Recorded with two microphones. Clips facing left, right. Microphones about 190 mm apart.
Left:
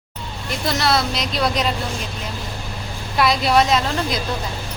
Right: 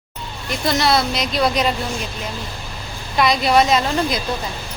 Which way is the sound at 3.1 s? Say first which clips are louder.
Right 1 dB; centre (ahead or behind).